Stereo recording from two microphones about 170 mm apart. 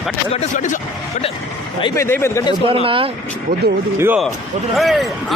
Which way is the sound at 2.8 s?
30° right (ahead or behind).